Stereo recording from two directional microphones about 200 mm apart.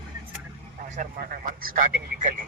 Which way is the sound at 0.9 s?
45° right (ahead or behind).